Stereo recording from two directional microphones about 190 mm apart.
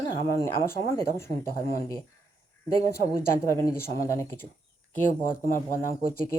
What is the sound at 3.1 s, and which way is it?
Speech, 15° left (ahead or behind).